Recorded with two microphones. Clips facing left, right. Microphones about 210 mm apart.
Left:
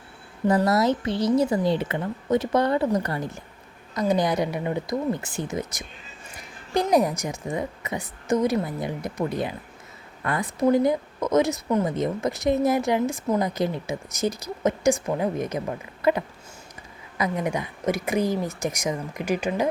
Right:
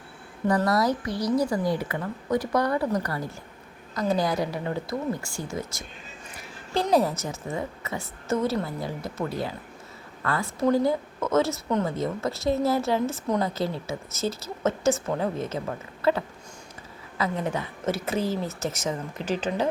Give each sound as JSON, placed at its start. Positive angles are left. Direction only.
{"t": 0.4, "sound": "a woman's voice", "side_deg": 25}
{"t": 6.8, "sound": "speech", "side_deg": 15}